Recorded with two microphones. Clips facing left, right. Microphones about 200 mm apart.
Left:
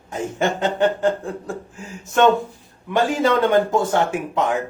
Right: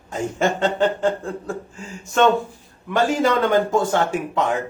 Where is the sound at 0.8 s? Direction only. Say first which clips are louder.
Left 1 dB; 15° left (ahead or behind).